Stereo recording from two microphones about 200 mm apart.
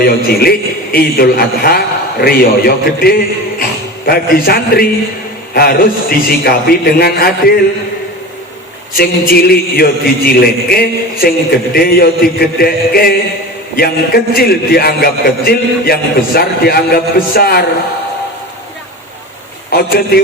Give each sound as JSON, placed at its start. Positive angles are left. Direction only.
{"t": 0.0, "sound": "a man's voice", "side_deg": 50}
{"t": 9.0, "sound": "a man's voice", "side_deg": 50}
{"t": 19.7, "sound": "a man's voice", "side_deg": 50}